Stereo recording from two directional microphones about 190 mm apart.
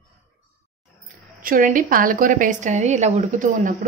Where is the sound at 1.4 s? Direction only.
45° right (ahead or behind).